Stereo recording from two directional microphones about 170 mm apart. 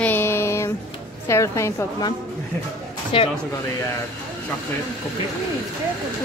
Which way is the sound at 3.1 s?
30° left (ahead or behind).